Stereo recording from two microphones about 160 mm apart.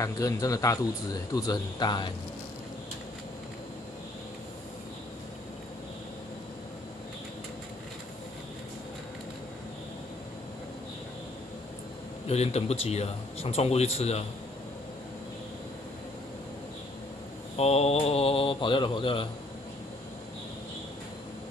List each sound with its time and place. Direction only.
0.0 s speech: 20° left (ahead or behind)
12.3 s speech: 40° left (ahead or behind)
17.6 s speech: 40° left (ahead or behind)